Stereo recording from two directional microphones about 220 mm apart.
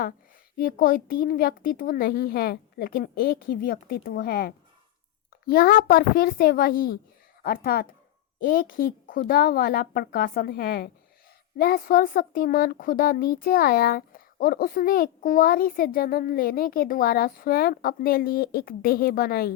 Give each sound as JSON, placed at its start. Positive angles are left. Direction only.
{"t": 0.5, "sound": "speech", "side_deg": 40}